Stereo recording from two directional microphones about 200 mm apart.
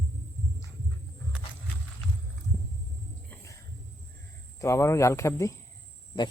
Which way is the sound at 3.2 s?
15° left (ahead or behind).